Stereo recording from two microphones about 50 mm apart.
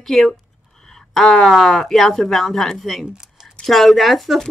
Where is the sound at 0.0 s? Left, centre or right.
Centre.